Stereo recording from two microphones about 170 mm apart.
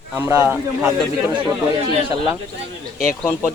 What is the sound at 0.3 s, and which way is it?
Speech, 15° right (ahead or behind).